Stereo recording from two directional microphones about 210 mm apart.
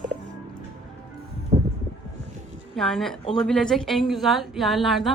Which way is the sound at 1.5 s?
30° right (ahead or behind).